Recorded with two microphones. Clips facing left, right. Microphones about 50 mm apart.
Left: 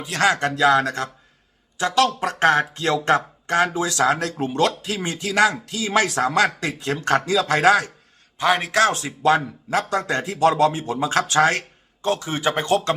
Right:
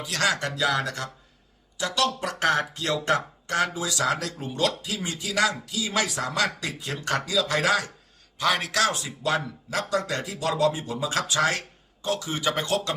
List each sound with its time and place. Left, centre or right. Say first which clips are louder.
0.0 s speech: left 6 dB; left
2.2 s speech: left 6 dB; left
4.0 s speech: left 6 dB; left
4.4 s speech: left 6 dB; left
6.2 s speech: left 7 dB; left
8.4 s a man's voice: left 5 dB; left
8.9 s speech: left 8 dB; left
11.3 s speech: left 7 dB; left